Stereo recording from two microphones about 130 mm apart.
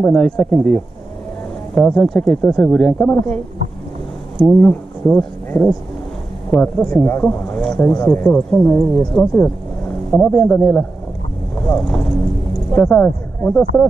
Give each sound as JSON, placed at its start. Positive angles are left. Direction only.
{"t": 0.0, "sound": "speech", "side_deg": 5}
{"t": 1.8, "sound": "speech", "side_deg": 5}
{"t": 4.6, "sound": "speech", "side_deg": 10}